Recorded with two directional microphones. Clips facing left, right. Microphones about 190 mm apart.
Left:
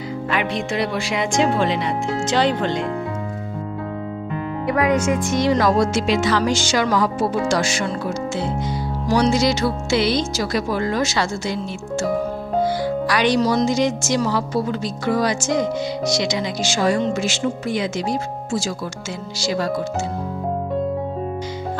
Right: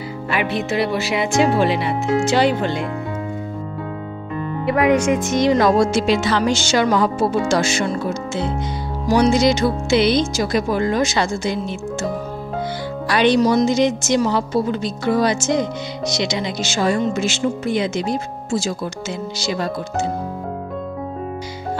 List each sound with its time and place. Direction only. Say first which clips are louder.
0.3 s speech: right 2 dB; 5° right (ahead or behind)
4.9 s a woman's voice: right 2 dB; 15° right (ahead or behind)
12.6 s music: left 4 dB; 25° right (ahead or behind)
13.4 s a woman's voice: right 3 dB; 15° right (ahead or behind)